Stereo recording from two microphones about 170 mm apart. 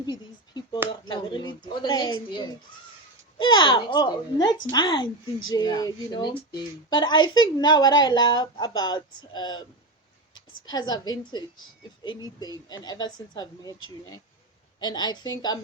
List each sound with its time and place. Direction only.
0.0 s a sound: 25° left (ahead or behind)
0.9 s a woman's voice: 25° left (ahead or behind)
10.7 s a woman's voice: 25° left (ahead or behind)